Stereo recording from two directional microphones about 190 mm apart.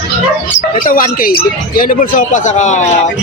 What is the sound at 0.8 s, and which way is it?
Speech, 45° left (ahead or behind).